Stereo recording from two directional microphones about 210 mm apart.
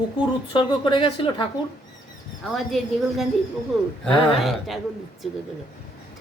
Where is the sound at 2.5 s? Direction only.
Centre (ahead or behind).